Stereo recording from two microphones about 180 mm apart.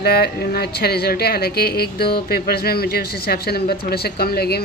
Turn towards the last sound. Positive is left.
turn(degrees=60)  # may be behind; listen again after turning